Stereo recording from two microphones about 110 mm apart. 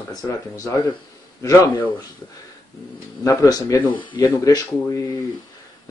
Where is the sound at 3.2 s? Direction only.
30° left (ahead or behind).